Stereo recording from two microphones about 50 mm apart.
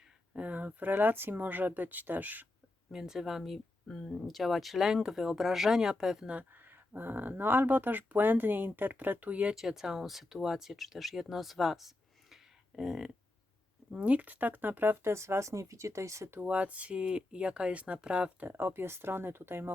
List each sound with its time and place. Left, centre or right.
0.3 s speech: right
2.9 s speech: centre
3.8 s speech: centre
4.1 s speech: centre
6.5 s speech: right
9.6 s speech: centre
14.0 s speech: right
15.1 s speech: right
16.4 s speech: right
18.4 s speech: right